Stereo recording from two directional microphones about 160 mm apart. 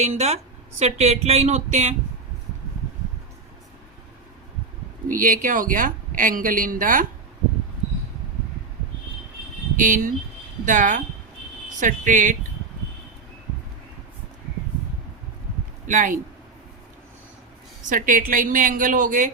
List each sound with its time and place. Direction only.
0.0 s speech: 45° right (ahead or behind)
5.0 s speech: 55° right (ahead or behind)
9.7 s speech: 55° right (ahead or behind)
15.9 s speech: 55° right (ahead or behind)
17.8 s speech: 55° right (ahead or behind)